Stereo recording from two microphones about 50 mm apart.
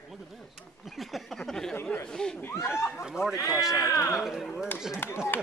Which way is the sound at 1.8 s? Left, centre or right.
Left.